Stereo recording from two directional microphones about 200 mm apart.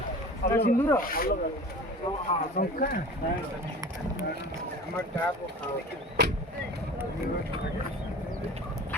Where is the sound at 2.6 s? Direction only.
45° left (ahead or behind).